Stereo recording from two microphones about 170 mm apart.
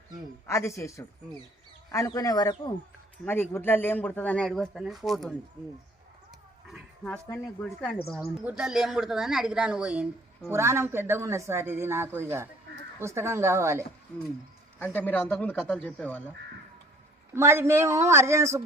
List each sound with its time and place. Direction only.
0.4 s speech: 15° left (ahead or behind)
3.2 s speech: 10° left (ahead or behind)
7.6 s speech: 5° left (ahead or behind); by 13.8 s 15° right (ahead or behind)
14.8 s speech: 10° left (ahead or behind)
17.3 s speech: 15° right (ahead or behind)